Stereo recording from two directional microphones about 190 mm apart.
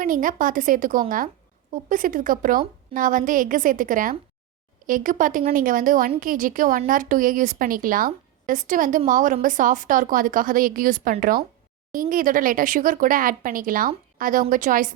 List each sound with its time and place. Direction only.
0.0 s a woman's voice: 45° right (ahead or behind)